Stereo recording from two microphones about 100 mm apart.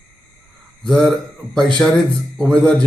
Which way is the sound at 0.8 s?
5° left (ahead or behind).